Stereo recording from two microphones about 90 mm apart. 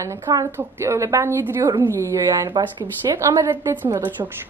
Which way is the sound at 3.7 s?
30° right (ahead or behind).